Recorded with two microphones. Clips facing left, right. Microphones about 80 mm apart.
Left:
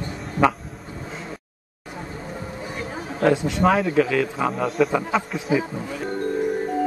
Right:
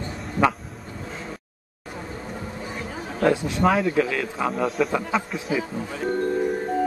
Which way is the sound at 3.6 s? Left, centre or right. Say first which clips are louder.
Left 1 dB; centre.